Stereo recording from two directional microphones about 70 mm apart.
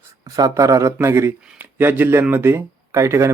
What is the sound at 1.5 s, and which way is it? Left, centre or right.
Speech, right.